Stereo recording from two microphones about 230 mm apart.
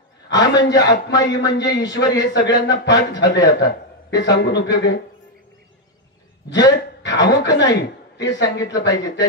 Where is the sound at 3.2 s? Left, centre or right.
Centre.